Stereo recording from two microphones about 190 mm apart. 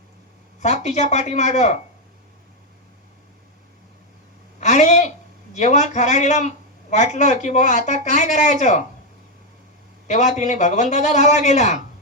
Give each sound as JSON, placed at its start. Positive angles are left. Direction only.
{"t": 0.6, "sound": "speech", "side_deg": 35}
{"t": 4.6, "sound": "a sound", "side_deg": 40}
{"t": 5.5, "sound": "speech", "side_deg": 40}
{"t": 10.1, "sound": "speech", "side_deg": 40}